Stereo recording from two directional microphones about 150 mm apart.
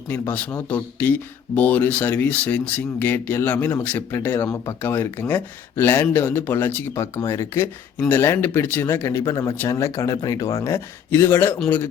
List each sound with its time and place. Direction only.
0.1 s speech: 10° left (ahead or behind)